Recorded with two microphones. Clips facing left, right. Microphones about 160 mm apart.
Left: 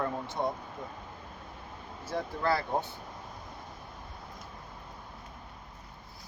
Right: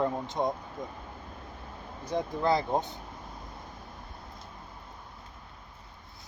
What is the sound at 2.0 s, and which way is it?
Speech, 20° right (ahead or behind).